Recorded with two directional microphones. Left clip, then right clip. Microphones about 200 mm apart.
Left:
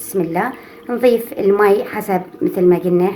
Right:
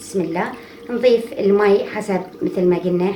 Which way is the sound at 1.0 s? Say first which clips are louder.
Left 1 dB; 50° left (ahead or behind).